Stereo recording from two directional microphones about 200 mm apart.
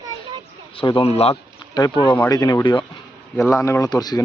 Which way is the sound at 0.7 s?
25° left (ahead or behind).